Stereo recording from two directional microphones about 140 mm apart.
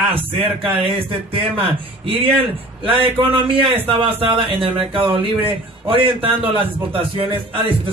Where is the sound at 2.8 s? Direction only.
40° right (ahead or behind).